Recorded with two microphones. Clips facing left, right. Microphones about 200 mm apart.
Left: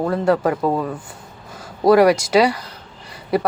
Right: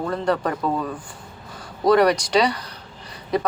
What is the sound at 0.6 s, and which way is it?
Speech, 25° left (ahead or behind).